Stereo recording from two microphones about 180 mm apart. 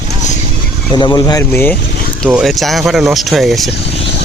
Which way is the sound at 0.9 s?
20° left (ahead or behind).